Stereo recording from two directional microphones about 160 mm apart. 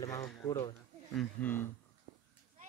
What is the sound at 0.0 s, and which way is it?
Speech, 20° left (ahead or behind).